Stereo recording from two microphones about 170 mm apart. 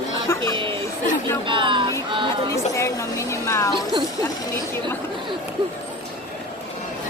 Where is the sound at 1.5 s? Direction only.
30° right (ahead or behind).